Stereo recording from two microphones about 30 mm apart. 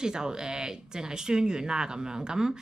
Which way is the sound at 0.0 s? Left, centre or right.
Right.